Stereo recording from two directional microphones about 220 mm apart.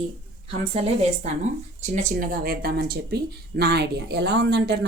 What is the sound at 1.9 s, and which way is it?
Speech, 40° right (ahead or behind).